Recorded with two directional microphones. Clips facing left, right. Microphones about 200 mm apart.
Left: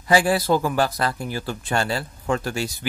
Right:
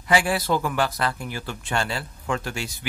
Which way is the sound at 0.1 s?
35° left (ahead or behind).